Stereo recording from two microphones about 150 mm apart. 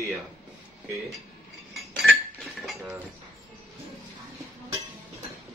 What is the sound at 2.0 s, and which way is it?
Cutlery, centre (ahead or behind).